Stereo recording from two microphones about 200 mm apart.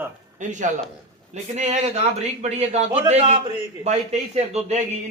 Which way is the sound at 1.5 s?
35° right (ahead or behind).